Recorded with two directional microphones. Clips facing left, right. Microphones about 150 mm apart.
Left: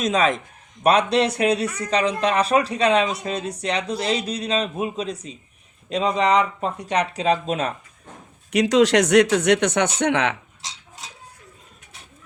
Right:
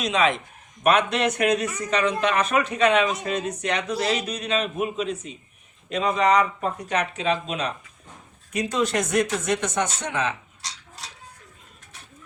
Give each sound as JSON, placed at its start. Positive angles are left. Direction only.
{"t": 0.0, "sound": "a man's voice", "side_deg": 45}
{"t": 8.5, "sound": "speech", "side_deg": 90}
{"t": 10.6, "sound": "a sound", "side_deg": 20}